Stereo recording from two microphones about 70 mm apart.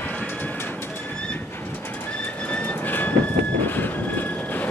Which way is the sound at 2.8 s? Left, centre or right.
Left.